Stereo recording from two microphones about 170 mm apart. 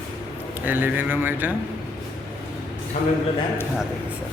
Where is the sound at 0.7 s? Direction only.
10° right (ahead or behind).